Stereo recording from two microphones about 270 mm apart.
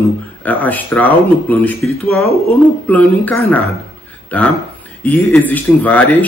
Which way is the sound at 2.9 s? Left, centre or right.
Centre.